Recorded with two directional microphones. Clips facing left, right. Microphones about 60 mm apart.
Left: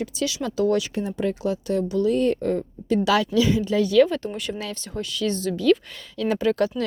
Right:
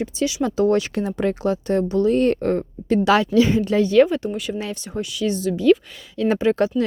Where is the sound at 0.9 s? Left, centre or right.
Right.